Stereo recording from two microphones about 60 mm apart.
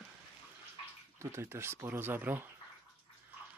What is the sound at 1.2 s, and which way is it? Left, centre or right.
Speech, right.